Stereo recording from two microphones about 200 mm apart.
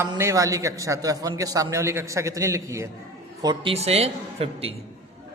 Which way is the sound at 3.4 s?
30° right (ahead or behind).